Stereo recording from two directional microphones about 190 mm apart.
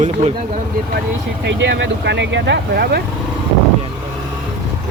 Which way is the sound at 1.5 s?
65° right (ahead or behind).